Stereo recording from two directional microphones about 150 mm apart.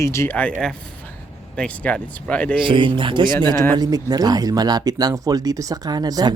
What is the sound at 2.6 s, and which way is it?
Speech, 35° right (ahead or behind).